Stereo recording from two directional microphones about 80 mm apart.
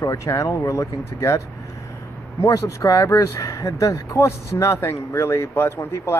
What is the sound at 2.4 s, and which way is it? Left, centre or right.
Speech, left.